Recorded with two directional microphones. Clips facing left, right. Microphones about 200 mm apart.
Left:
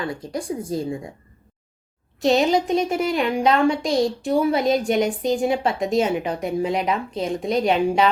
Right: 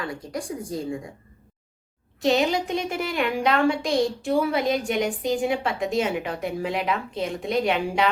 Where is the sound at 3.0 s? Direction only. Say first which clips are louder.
Left 4 dB; 25° left (ahead or behind).